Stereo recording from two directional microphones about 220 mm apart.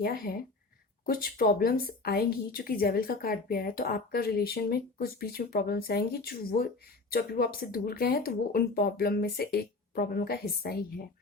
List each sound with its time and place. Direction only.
0.0 s speech: 40° left (ahead or behind)